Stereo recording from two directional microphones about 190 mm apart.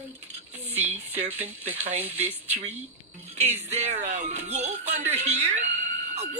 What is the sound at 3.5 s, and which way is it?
Speech, 40° right (ahead or behind).